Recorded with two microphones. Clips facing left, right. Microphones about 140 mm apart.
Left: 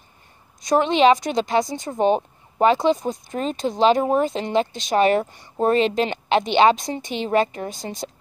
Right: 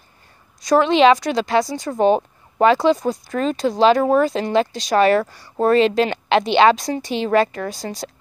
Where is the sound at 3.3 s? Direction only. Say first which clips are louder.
Right 4 dB; 45° right (ahead or behind).